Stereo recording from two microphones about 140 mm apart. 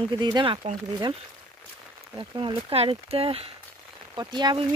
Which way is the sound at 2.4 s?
40° right (ahead or behind).